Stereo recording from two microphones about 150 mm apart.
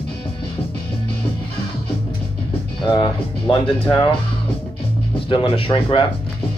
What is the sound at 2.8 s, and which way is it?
Speech, 30° left (ahead or behind).